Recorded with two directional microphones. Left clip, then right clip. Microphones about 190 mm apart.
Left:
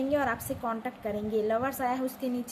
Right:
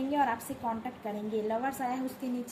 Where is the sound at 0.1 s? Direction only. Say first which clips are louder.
Even; 30° left (ahead or behind).